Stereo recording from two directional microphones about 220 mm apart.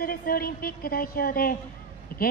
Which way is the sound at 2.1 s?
40° left (ahead or behind).